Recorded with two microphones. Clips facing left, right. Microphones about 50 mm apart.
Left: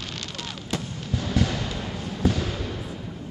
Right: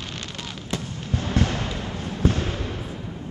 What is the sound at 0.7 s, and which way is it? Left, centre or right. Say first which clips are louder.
Fireworks: right 1 dB; right.